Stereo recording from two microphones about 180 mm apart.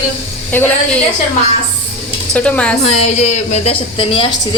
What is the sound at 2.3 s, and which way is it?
Speech, 5° left (ahead or behind).